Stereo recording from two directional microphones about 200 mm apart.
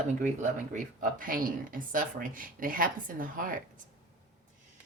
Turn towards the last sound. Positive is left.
turn(degrees=-45)  # may be behind; listen again after turning